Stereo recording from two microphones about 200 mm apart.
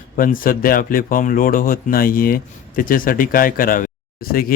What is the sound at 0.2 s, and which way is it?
Speech, 45° left (ahead or behind).